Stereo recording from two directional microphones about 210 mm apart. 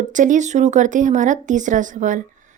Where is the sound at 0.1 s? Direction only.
35° right (ahead or behind).